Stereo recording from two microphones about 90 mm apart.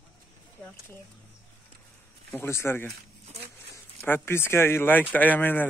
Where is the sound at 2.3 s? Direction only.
30° left (ahead or behind).